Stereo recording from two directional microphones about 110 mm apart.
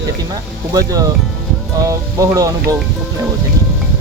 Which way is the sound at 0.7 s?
35° right (ahead or behind).